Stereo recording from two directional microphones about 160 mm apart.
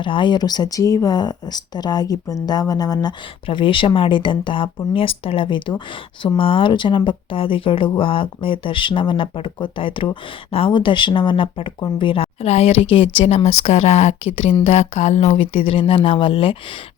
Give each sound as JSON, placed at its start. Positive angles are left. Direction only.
{"t": 0.0, "sound": "speech", "side_deg": 30}